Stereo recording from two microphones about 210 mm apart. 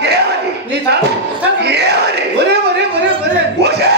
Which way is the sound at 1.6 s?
50° right (ahead or behind).